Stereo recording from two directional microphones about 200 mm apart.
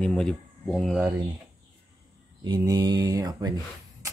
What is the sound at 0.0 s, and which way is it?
Speech, 5° left (ahead or behind).